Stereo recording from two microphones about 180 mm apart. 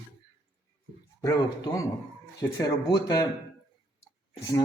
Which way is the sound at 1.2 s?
15° left (ahead or behind).